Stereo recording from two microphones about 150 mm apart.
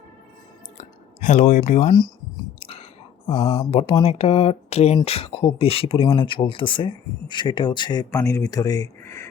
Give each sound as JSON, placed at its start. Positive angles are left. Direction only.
{"t": 0.8, "sound": "a sound", "side_deg": 55}
{"t": 1.9, "sound": "speech", "side_deg": 30}
{"t": 2.6, "sound": "whispering", "side_deg": 40}
{"t": 3.2, "sound": "speech", "side_deg": 40}